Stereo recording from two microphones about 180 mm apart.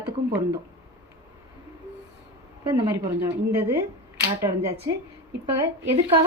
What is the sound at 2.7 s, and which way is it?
A woman's voice, 15° right (ahead or behind).